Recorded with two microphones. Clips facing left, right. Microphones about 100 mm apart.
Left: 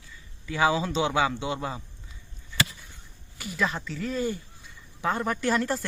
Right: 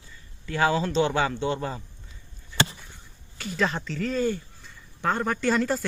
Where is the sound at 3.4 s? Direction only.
10° left (ahead or behind).